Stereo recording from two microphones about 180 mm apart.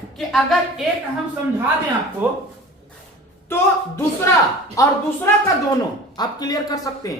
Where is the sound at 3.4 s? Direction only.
15° left (ahead or behind).